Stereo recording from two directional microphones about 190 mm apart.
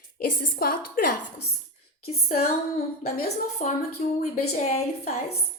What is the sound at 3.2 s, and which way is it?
A woman's voice, 40° left (ahead or behind).